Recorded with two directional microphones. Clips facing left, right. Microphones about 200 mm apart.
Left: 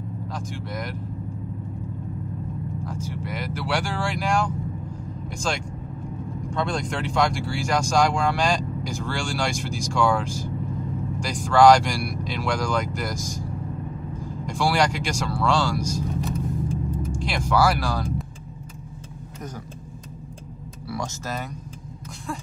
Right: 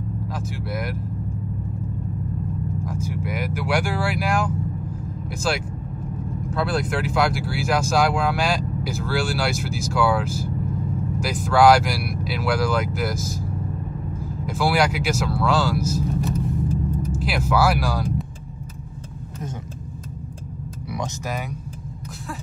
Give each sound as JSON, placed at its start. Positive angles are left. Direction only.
{"t": 0.3, "sound": "speech", "side_deg": -10}
{"t": 2.8, "sound": "speech", "side_deg": -10}
{"t": 20.9, "sound": "speech", "side_deg": -15}